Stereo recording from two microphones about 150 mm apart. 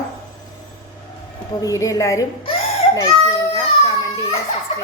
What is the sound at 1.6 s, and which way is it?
Speech, 20° left (ahead or behind).